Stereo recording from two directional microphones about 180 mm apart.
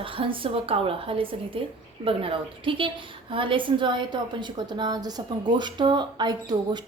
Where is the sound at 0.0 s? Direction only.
30° right (ahead or behind).